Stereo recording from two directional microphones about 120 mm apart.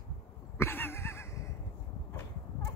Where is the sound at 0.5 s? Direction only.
20° left (ahead or behind).